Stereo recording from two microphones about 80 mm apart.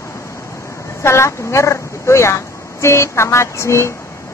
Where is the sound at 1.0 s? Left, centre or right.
Left.